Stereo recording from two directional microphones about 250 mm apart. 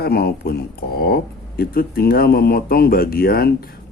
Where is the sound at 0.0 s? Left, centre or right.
Left.